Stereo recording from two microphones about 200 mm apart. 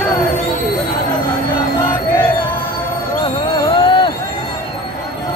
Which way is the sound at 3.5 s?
25° left (ahead or behind).